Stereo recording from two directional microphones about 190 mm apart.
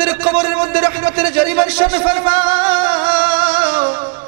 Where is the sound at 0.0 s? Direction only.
10° right (ahead or behind).